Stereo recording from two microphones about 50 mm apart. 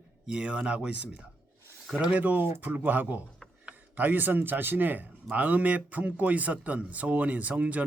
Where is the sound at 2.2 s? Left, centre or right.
Right.